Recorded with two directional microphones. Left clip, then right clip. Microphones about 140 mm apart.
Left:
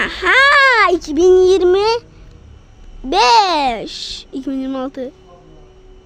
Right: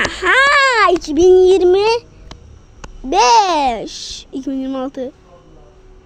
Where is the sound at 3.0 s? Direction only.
10° left (ahead or behind).